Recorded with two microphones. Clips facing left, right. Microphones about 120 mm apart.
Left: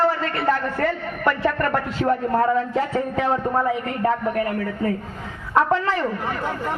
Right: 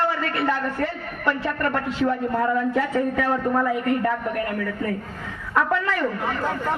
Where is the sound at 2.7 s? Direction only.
30° left (ahead or behind).